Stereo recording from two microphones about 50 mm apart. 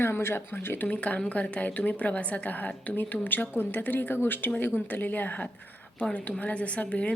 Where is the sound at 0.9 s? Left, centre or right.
Left.